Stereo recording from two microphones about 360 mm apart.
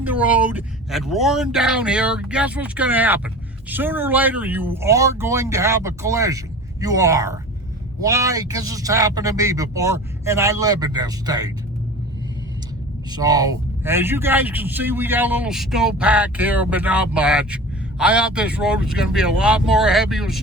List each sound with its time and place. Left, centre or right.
0.0 s speech: centre
13.1 s speech: centre